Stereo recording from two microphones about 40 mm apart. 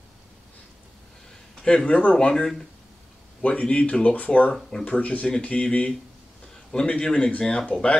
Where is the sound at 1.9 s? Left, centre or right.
Left.